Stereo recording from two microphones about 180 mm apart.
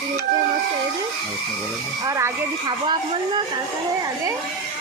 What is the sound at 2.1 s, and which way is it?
Speech, 15° right (ahead or behind).